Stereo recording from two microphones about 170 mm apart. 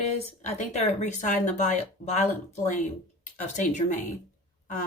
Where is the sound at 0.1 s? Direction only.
40° left (ahead or behind).